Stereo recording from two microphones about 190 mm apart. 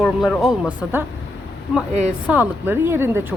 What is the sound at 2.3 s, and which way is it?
Speech, 10° right (ahead or behind).